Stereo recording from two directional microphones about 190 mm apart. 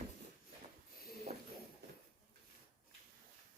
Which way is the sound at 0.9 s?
50° left (ahead or behind).